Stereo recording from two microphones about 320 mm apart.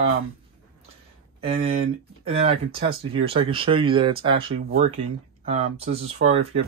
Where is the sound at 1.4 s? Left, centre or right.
Centre.